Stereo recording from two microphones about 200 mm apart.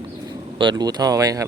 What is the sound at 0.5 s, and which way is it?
Speech, 20° right (ahead or behind).